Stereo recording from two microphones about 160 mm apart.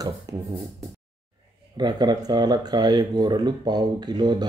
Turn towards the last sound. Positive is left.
turn(degrees=-25)  # may be behind; listen again after turning